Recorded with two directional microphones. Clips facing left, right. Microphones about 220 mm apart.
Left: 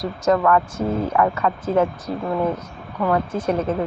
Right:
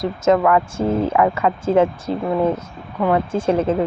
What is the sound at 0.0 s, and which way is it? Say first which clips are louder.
Speech: right 3 dB; 20° right (ahead or behind).